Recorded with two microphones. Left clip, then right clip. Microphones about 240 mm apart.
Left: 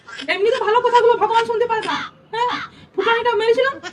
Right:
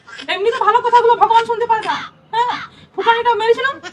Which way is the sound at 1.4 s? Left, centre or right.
Centre.